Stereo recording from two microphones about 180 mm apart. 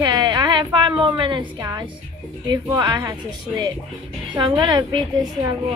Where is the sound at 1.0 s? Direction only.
25° right (ahead or behind).